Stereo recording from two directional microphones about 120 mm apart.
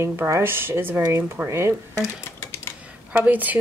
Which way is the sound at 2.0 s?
20° left (ahead or behind).